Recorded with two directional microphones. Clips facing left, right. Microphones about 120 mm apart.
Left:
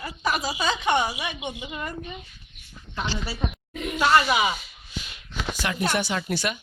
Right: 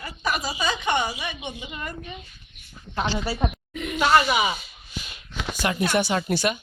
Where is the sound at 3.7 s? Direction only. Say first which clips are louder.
Even; 35° left (ahead or behind).